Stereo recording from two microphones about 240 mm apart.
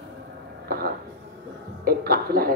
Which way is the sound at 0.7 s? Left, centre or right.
Right.